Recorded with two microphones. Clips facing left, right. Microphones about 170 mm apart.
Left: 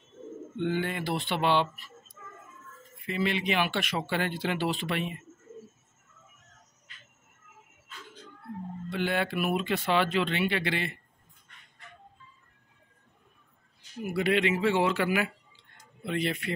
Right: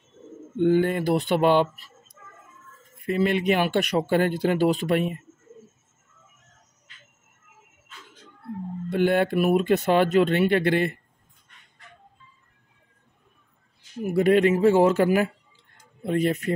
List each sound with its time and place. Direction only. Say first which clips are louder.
0.6 s speech: right 10 dB; 45° right (ahead or behind)
3.0 s speech: right 7 dB; 45° right (ahead or behind)
8.9 s speech: right 8 dB; 50° right (ahead or behind)
14.1 s speech: right 8 dB; 45° right (ahead or behind)